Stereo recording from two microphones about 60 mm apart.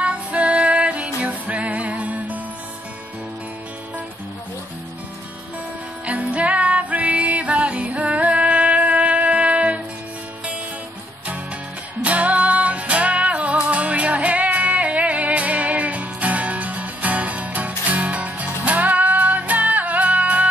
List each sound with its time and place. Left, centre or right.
0.0 s music: right
6.0 s music: right
12.0 s music: right